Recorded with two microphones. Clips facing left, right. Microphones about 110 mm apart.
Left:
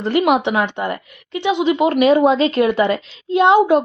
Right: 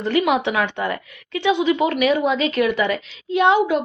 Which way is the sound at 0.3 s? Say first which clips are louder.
Left 3 dB; 20° left (ahead or behind).